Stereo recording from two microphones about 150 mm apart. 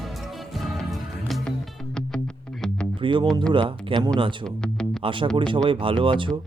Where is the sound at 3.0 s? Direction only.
30° right (ahead or behind).